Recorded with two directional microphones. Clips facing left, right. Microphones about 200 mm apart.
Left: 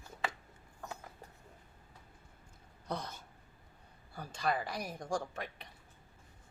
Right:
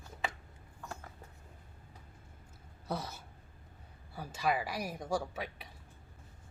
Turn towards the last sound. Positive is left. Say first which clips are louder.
# right 2 dB
turn(degrees=-5)  # may be behind; listen again after turning